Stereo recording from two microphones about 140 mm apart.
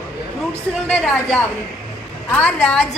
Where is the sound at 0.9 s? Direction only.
5° left (ahead or behind).